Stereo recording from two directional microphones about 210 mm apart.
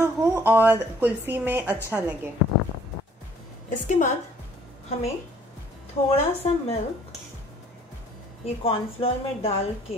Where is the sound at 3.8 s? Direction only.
35° left (ahead or behind).